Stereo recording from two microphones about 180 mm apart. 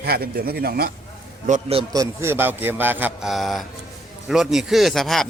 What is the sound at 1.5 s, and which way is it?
Speech, 40° right (ahead or behind).